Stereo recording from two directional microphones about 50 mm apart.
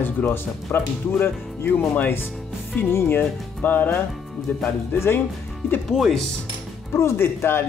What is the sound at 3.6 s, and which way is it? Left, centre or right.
Speech, left.